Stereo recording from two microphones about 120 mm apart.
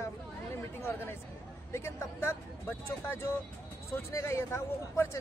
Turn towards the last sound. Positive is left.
turn(degrees=20)  # may be behind; listen again after turning